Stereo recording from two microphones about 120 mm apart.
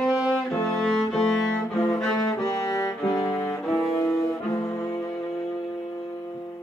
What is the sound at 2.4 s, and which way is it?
Music, 30° left (ahead or behind).